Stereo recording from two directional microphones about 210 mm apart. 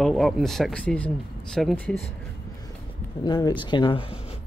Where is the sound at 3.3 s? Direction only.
20° left (ahead or behind).